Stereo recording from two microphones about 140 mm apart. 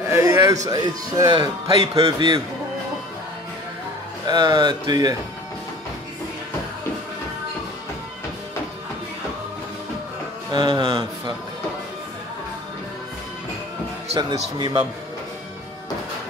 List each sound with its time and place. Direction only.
0.1 s a sound: 20° right (ahead or behind)
0.7 s a man's voice: 25° right (ahead or behind)
4.3 s speech: 30° right (ahead or behind)
10.5 s speech: 30° right (ahead or behind)
14.1 s a man's voice: 30° right (ahead or behind)